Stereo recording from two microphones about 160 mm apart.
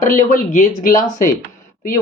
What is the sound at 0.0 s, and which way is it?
Speech, 55° left (ahead or behind).